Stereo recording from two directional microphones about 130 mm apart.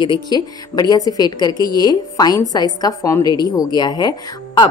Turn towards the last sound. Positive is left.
turn(degrees=35)  # may be behind; listen again after turning